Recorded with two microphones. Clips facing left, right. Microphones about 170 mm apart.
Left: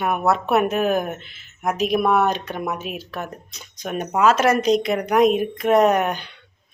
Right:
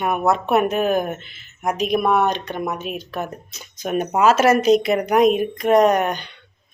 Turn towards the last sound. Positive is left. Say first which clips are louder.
# right 1 dB
turn(degrees=5)  # may be behind; listen again after turning